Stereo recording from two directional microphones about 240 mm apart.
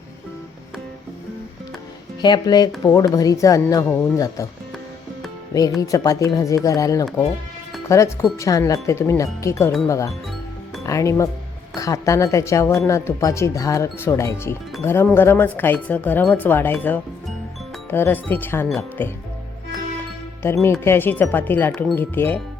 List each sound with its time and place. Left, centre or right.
2.2 s speech: centre
5.5 s speech: centre
20.4 s speech: centre